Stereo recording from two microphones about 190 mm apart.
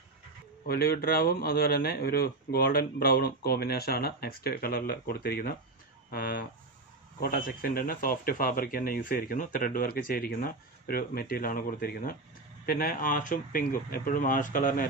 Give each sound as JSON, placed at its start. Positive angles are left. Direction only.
{"t": 0.7, "sound": "speech", "side_deg": 55}